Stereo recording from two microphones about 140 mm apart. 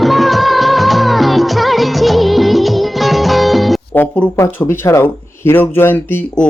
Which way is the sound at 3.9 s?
15° left (ahead or behind).